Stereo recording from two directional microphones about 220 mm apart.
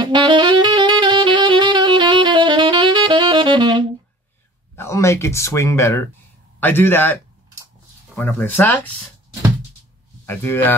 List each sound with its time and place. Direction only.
0.0 s saxophone: 20° right (ahead or behind)
4.7 s speech: 15° left (ahead or behind)
8.2 s speech: 10° left (ahead or behind)
10.2 s speech: 10° left (ahead or behind)